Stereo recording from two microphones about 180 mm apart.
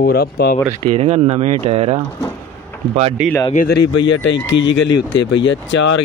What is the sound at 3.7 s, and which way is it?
Speech, 80° left.